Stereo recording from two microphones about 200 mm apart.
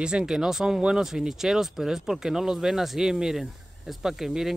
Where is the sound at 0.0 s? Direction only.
5° right (ahead or behind).